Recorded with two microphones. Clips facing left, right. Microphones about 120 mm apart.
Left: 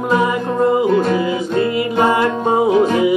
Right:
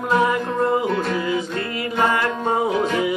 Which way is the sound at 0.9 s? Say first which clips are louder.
Left 6 dB; 15° left (ahead or behind).